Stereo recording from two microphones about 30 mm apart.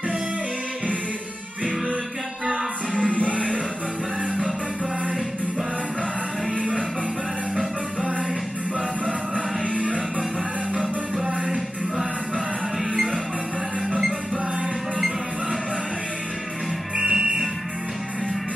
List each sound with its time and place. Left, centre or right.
2.9 s music: left
9.8 s music: right
11.2 s music: right
17.0 s music: centre